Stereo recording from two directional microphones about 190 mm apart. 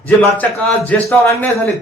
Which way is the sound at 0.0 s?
10° left (ahead or behind).